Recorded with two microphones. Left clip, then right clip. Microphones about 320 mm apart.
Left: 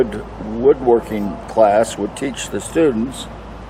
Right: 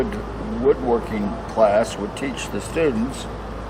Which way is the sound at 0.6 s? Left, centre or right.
Left.